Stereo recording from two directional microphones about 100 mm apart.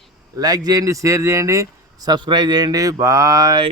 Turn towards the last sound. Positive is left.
turn(degrees=-35)  # may be behind; listen again after turning